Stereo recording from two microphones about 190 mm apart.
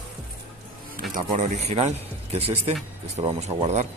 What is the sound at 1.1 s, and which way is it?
Speech, 40° right (ahead or behind).